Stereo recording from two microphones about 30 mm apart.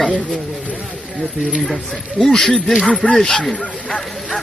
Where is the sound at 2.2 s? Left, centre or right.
Centre.